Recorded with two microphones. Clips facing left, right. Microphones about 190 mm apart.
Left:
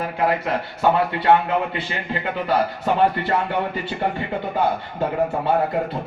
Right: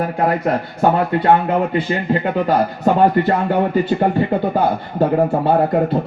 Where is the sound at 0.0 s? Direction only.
45° right (ahead or behind).